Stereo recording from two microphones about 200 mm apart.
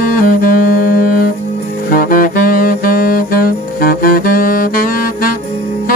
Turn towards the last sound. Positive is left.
turn(degrees=45)  # may be behind; listen again after turning